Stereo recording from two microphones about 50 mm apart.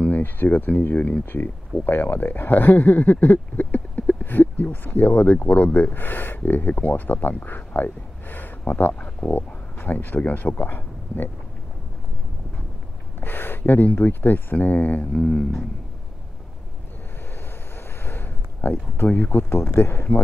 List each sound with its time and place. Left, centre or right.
0.2 s speech: left
8.9 s speech: left
9.3 s speech: left
13.2 s speech: left
15.1 s speech: centre
18.0 s a sound: left
19.0 s speech: left
19.5 s speech: left